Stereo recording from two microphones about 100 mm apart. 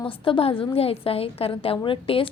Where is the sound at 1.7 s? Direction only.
60° left (ahead or behind).